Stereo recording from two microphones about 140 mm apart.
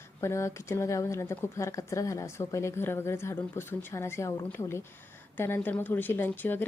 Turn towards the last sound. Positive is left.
turn(degrees=15)  # may be behind; listen again after turning